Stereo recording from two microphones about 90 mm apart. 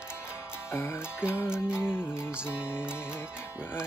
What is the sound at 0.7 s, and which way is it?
Music, 30° left (ahead or behind).